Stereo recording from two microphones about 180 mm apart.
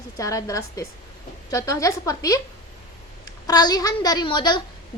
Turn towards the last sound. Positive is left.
turn(degrees=25)  # may be behind; listen again after turning